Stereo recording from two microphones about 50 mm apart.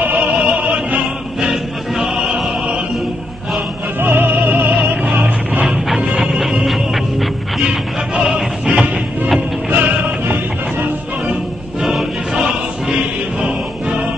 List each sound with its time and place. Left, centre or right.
0.0 s opera: right
0.5 s music: right
1.5 s music: centre
4.0 s music: right
6.5 s music: centre
7.6 s music: centre
9.7 s music: right
11.8 s choir: centre
13.4 s choir: right